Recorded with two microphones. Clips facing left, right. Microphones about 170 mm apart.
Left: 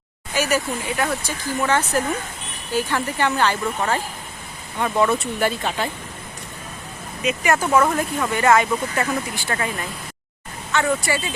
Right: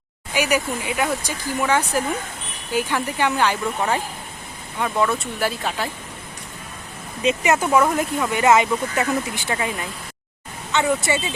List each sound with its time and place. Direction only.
0.3 s speech: 15° right (ahead or behind)
4.8 s speech: centre (ahead or behind)
7.2 s speech: 25° right (ahead or behind)
7.7 s speech: 5° right (ahead or behind)